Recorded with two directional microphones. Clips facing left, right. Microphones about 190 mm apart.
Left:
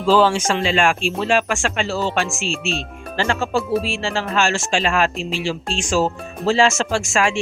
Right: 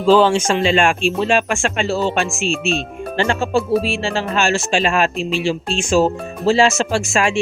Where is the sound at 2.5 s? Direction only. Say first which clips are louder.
Right 5 dB; 50° right (ahead or behind).